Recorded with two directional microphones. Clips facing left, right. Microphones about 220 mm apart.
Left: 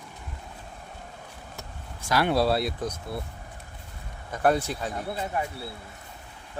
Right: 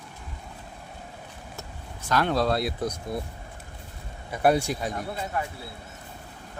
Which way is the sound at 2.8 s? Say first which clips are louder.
Right 2 dB; 15° right (ahead or behind).